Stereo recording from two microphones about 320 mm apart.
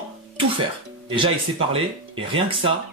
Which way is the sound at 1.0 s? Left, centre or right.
Centre.